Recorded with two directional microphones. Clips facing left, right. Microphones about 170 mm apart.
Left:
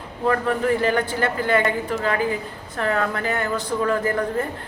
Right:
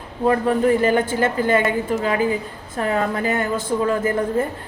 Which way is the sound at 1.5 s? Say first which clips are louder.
Right 2 dB; 20° right (ahead or behind).